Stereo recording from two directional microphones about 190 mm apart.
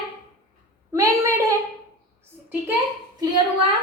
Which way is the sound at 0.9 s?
15° right (ahead or behind).